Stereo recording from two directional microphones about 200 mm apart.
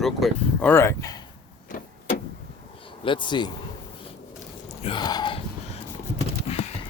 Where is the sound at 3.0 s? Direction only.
25° left (ahead or behind).